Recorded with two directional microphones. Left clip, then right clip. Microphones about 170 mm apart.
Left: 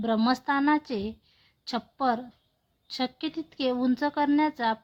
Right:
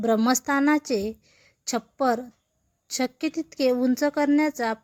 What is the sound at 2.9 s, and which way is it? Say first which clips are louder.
Speech: right 4 dB; 20° right (ahead or behind).